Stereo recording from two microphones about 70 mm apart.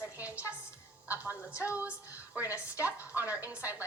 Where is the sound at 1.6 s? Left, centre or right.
Right.